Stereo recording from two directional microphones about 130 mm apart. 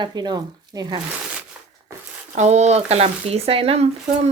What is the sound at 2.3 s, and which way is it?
Speech, 60° right (ahead or behind).